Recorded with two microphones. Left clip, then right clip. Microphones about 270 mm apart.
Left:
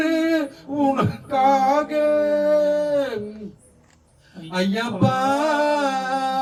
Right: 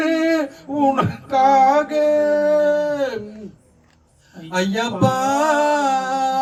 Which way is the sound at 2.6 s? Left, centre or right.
Right.